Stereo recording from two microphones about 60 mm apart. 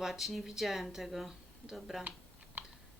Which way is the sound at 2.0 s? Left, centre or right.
Right.